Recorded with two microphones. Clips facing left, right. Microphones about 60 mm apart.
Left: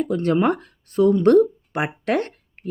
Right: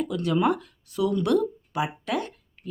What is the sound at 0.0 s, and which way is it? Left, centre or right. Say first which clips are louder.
Speech: left 4 dB; left.